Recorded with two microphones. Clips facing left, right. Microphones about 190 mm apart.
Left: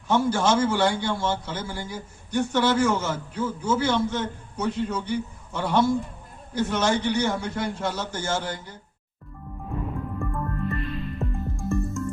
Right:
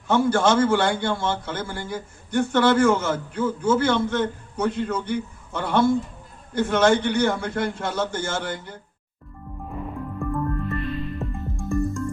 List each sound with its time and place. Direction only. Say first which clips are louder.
0.1 s a man's voice: right 2 dB; 60° right (ahead or behind)
10.2 s music: right 5 dB; centre (ahead or behind)